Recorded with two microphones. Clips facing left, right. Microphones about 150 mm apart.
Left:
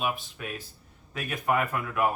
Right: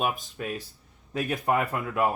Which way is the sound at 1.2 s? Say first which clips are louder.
Right 2 dB; 30° right (ahead or behind).